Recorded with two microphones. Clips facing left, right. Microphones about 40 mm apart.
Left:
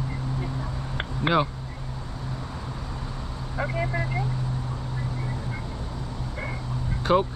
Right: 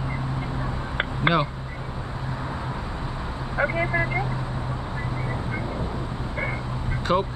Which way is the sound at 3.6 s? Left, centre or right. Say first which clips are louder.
Right 5 dB; right.